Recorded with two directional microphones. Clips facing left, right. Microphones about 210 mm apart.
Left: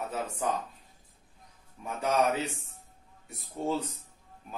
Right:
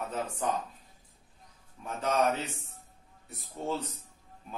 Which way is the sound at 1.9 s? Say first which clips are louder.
Left 1 dB; 10° left (ahead or behind).